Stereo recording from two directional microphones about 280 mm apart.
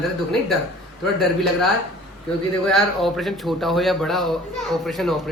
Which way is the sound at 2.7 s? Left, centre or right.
Centre.